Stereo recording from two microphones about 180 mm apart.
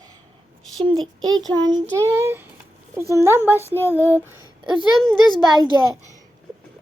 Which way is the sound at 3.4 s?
15° left (ahead or behind).